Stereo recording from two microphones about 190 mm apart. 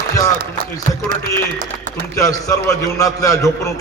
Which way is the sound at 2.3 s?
15° left (ahead or behind).